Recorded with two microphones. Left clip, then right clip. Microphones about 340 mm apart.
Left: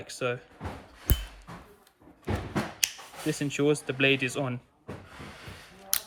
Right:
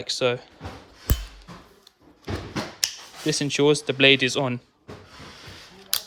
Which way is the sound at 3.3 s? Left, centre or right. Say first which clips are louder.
Right 6 dB; centre.